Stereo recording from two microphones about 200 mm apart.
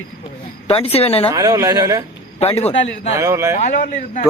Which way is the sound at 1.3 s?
20° right (ahead or behind).